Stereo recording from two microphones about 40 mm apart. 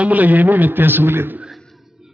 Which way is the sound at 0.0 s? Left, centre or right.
Right.